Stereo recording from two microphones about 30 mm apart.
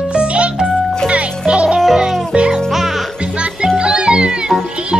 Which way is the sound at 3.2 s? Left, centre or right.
Right.